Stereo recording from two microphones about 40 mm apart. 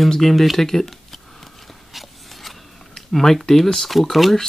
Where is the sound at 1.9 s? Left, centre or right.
Centre.